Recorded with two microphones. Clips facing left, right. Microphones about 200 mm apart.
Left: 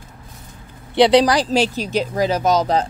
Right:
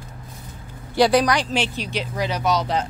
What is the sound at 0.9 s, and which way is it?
Speech, 25° left (ahead or behind).